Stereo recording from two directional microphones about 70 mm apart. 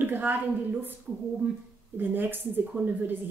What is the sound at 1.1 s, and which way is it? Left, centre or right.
Speech, centre.